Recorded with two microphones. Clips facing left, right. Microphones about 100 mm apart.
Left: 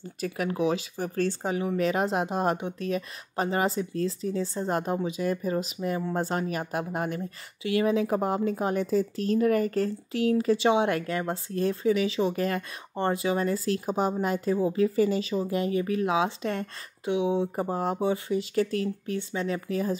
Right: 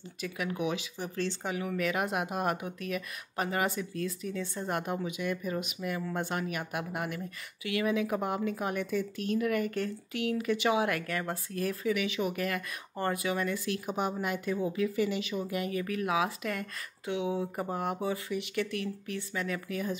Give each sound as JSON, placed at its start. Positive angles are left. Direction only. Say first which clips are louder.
{"t": 0.2, "sound": "speech", "louder": "left 6 dB", "side_deg": 40}
{"t": 1.5, "sound": "speech", "louder": "left 4 dB", "side_deg": 30}